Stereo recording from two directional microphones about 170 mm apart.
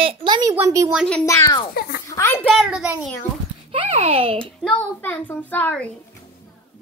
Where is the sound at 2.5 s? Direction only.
5° right (ahead or behind).